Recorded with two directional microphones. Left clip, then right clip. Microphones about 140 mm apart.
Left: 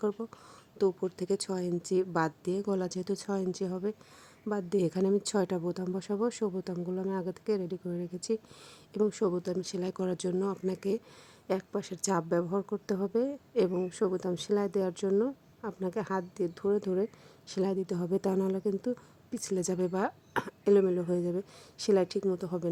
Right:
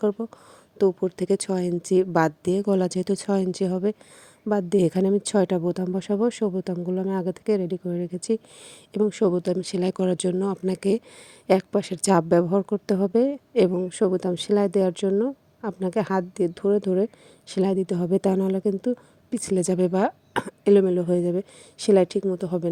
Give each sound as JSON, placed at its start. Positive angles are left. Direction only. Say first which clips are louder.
{"t": 0.0, "sound": "speech", "louder": "right 8 dB", "side_deg": -30}